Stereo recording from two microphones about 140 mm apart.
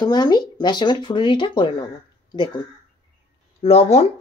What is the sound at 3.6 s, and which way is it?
Speech, 50° left (ahead or behind).